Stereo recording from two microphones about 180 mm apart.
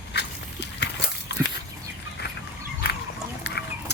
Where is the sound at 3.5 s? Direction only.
75° left (ahead or behind).